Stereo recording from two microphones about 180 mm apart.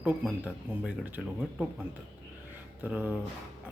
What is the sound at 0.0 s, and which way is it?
Speech, 10° right (ahead or behind).